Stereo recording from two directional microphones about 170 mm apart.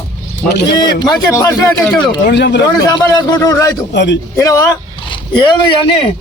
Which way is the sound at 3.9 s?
90° left.